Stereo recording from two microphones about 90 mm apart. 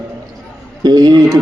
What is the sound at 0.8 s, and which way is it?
Speech, 50° right (ahead or behind).